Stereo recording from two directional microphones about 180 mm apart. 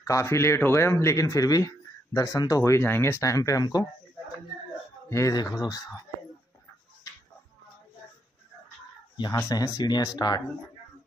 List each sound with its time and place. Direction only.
0.0 s speech: 15° left (ahead or behind)
5.1 s speech: 20° left (ahead or behind)
9.1 s speech: 20° left (ahead or behind)